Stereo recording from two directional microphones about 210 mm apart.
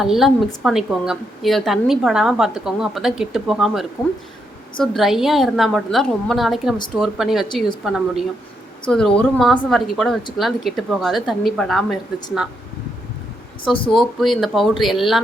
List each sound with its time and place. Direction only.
0.0 s a woman's voice: centre (ahead or behind)
7.4 s a woman's voice: 20° left (ahead or behind)
7.9 s a woman's voice: centre (ahead or behind)
13.9 s a woman's voice: centre (ahead or behind)